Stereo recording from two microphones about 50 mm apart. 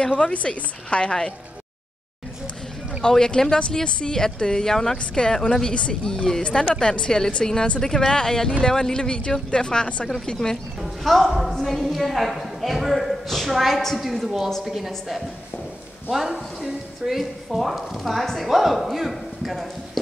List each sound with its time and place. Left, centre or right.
0.2 s a woman's voice: left
3.0 s speech: centre
10.8 s a woman's voice: centre
16.3 s speech: centre